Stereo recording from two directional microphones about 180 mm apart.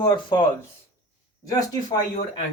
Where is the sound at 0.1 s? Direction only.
25° left (ahead or behind).